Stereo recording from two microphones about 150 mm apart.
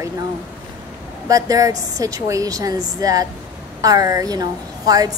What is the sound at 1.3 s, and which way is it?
A woman's voice, 25° right (ahead or behind).